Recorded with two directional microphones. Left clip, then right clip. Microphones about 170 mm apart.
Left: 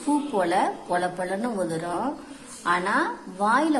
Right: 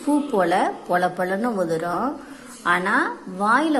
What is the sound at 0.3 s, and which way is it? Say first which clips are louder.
A woman's voice: right 3 dB; 10° right (ahead or behind).